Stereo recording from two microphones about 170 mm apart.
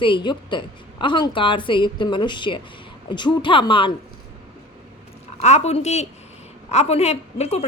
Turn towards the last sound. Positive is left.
turn(degrees=40)  # may be behind; listen again after turning